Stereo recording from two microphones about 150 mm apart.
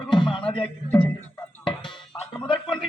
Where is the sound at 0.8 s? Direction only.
10° left (ahead or behind).